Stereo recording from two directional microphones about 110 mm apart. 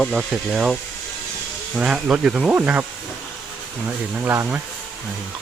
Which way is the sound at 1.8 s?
10° right (ahead or behind).